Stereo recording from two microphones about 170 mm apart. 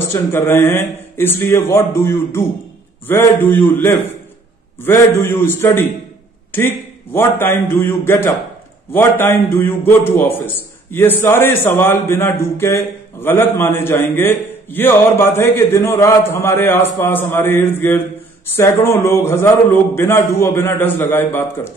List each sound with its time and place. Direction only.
0.1 s a man's voice: 15° left (ahead or behind)